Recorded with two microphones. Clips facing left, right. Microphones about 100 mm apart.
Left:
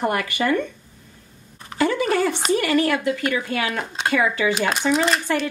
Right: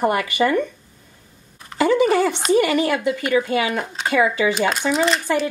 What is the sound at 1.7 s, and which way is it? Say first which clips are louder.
A woman's voice: right 4 dB; 15° right (ahead or behind).